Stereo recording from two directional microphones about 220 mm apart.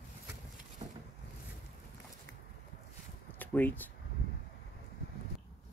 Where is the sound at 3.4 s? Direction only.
10° left (ahead or behind).